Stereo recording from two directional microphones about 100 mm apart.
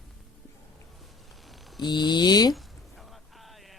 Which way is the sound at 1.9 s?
45° left (ahead or behind).